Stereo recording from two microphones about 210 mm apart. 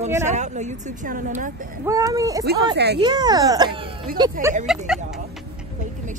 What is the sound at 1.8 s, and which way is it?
Speech, 15° right (ahead or behind).